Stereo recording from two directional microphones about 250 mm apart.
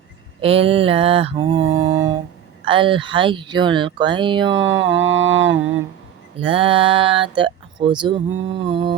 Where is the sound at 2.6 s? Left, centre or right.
Centre.